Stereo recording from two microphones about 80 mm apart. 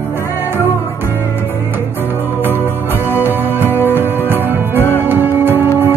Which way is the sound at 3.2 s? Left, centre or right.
Right.